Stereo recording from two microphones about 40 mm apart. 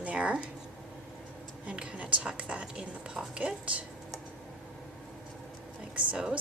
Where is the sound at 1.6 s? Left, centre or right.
Right.